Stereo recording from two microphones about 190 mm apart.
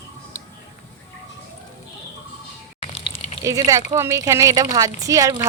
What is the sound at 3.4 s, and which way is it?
A woman's voice, 15° right (ahead or behind).